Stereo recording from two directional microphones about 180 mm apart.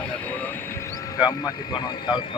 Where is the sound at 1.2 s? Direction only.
20° left (ahead or behind).